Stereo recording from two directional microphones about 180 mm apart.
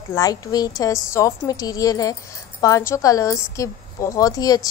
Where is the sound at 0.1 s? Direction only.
20° left (ahead or behind).